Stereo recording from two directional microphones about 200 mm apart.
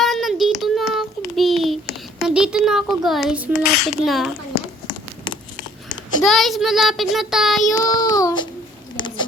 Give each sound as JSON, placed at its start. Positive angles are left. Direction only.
{"t": 0.0, "sound": "child singing", "side_deg": 0}
{"t": 2.2, "sound": "a child's voice", "side_deg": -5}
{"t": 6.2, "sound": "a child's voice", "side_deg": 0}
{"t": 7.7, "sound": "child singing", "side_deg": 15}